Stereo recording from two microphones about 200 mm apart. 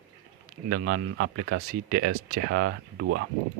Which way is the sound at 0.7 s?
65° right (ahead or behind).